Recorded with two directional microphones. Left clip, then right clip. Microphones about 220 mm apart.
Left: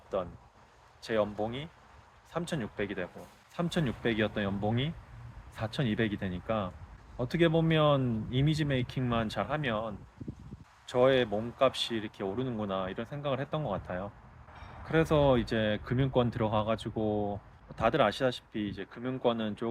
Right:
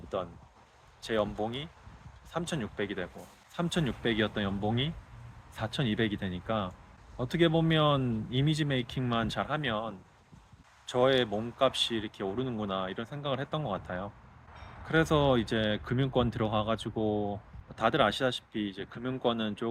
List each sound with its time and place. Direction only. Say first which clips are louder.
1.0 s speech: even; 5° right (ahead or behind)